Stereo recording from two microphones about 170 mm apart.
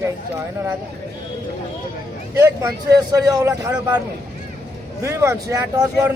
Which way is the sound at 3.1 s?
20° right (ahead or behind).